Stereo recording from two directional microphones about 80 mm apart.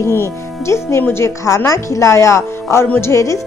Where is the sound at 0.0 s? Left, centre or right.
Left.